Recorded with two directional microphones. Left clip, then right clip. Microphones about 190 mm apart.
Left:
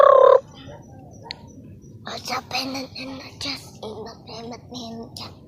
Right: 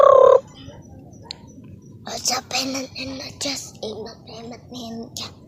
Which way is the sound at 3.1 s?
45° right (ahead or behind).